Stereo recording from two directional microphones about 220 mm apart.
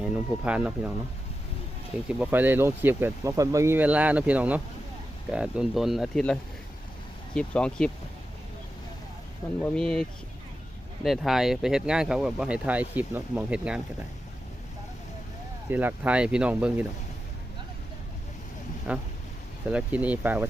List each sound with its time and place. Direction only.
0.0 s speech: 5° right (ahead or behind)
2.0 s speech: 5° right (ahead or behind)
9.4 s speech: 15° left (ahead or behind)
9.7 s speech: centre (ahead or behind)
15.7 s speech: 10° right (ahead or behind)
18.9 s speech: 5° right (ahead or behind)